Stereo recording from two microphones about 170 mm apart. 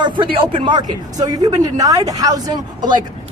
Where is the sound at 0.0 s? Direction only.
30° right (ahead or behind).